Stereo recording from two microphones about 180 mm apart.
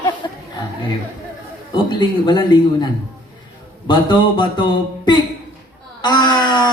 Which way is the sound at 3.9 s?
25° left (ahead or behind).